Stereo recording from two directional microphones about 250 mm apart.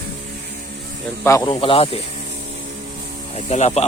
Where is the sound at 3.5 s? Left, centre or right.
Left.